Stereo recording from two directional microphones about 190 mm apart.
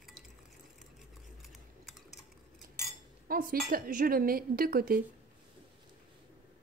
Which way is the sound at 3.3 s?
50° right (ahead or behind).